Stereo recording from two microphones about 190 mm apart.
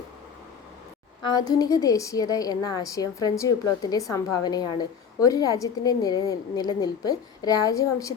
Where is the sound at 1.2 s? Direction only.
20° left (ahead or behind).